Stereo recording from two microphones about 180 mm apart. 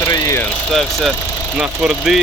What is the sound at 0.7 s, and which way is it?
Speech, centre (ahead or behind).